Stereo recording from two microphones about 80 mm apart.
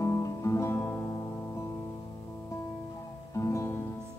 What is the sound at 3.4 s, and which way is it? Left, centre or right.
Music, left.